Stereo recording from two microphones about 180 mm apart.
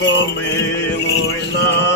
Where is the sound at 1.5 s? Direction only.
70° left (ahead or behind).